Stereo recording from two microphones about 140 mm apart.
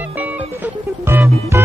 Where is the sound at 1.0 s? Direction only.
20° right (ahead or behind).